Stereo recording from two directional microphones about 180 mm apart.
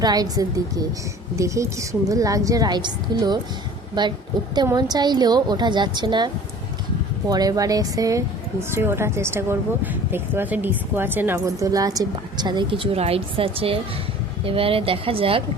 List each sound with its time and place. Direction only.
0.0 s a woman's voice: 20° right (ahead or behind)